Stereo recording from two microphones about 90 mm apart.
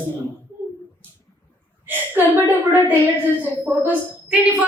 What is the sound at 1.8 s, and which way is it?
A woman's voice, 25° right (ahead or behind).